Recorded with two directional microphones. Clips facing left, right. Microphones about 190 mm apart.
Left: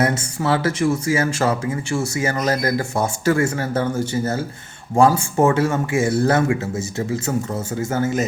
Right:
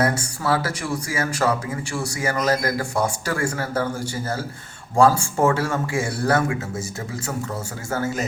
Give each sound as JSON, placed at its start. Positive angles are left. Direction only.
{"t": 0.0, "sound": "speech", "side_deg": 20}